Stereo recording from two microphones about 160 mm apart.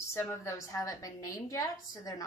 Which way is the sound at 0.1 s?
15° left (ahead or behind).